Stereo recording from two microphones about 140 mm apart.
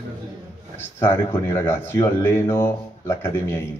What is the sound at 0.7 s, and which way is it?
Speech, 15° left (ahead or behind).